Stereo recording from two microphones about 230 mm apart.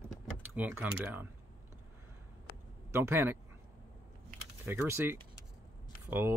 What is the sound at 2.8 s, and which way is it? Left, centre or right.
Speech, centre.